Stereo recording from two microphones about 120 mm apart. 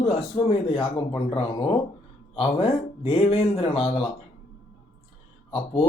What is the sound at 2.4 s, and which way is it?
Speech, 50° left (ahead or behind).